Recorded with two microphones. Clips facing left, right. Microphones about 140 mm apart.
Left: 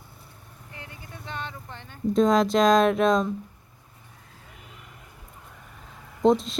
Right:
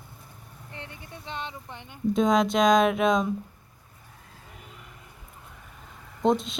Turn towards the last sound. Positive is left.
turn(degrees=0)  # may be behind; listen again after turning